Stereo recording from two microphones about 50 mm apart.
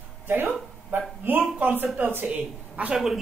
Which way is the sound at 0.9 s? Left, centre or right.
Right.